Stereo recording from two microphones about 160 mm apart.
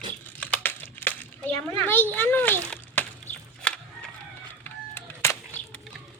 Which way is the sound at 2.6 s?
10° left (ahead or behind).